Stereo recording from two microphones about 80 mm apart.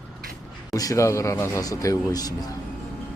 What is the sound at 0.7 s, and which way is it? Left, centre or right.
A man's voice, left.